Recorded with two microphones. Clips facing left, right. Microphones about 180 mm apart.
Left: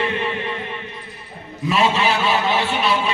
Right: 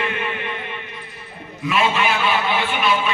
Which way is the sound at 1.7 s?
35° left (ahead or behind).